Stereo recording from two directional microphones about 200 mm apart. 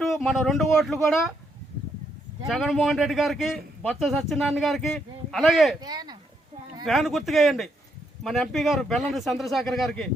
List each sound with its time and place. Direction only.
0.0 s speech: centre (ahead or behind)
2.5 s a man's voice: centre (ahead or behind)
5.8 s speech: 20° right (ahead or behind)
6.8 s a man's voice: centre (ahead or behind)